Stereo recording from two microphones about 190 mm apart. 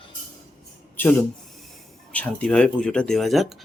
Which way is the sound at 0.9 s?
10° left (ahead or behind).